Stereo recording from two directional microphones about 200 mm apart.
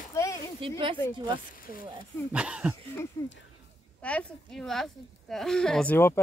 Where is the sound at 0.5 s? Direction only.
25° right (ahead or behind).